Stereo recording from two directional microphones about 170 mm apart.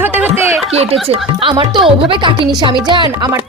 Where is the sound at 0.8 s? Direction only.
35° right (ahead or behind).